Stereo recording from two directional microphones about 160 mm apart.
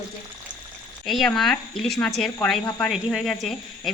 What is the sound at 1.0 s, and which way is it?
Speech, centre (ahead or behind).